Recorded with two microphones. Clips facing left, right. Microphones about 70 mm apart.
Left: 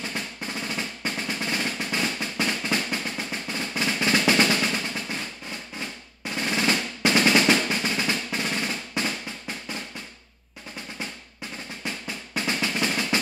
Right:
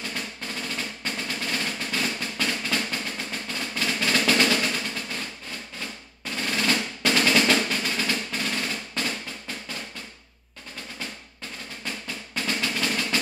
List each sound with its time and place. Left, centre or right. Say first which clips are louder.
0.1 s drum roll: left 1 dB; left
5.8 s drum roll: left 2 dB; left
11.8 s drum roll: left 1 dB; centre